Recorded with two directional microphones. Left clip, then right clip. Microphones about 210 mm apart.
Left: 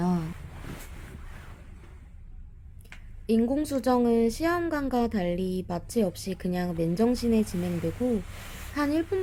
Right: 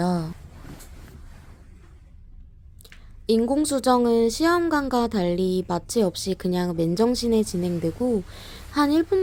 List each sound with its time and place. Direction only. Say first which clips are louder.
0.0 s a sound: right 5 dB; 15° right (ahead or behind)
3.2 s a woman's voice: right 5 dB; 20° right (ahead or behind)
8.7 s a woman's voice: right 7 dB; 20° right (ahead or behind)